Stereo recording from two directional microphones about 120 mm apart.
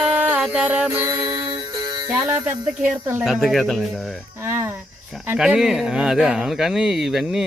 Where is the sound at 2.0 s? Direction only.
20° right (ahead or behind).